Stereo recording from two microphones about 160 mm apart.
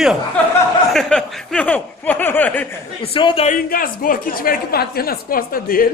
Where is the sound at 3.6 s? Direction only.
60° left (ahead or behind).